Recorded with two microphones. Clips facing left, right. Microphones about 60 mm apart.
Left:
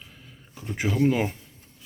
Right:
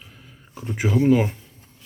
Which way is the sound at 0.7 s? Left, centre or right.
Centre.